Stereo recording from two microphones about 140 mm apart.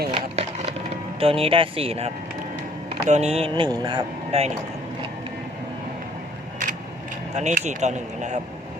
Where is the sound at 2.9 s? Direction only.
55° right (ahead or behind).